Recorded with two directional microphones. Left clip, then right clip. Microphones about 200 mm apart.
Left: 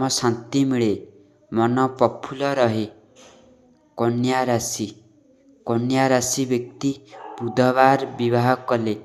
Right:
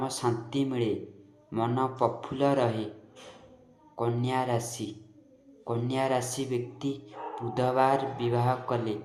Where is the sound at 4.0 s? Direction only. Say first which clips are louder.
Left 8 dB; 35° left (ahead or behind).